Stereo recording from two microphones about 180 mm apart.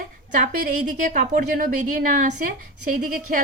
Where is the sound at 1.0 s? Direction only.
45° right (ahead or behind).